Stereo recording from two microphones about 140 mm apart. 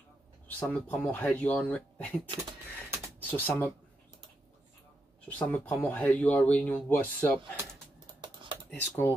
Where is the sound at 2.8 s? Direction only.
15° right (ahead or behind).